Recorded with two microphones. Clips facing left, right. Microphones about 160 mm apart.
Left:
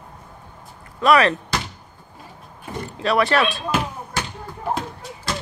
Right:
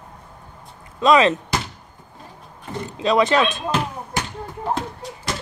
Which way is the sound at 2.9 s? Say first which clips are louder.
Right 2 dB; 20° right (ahead or behind).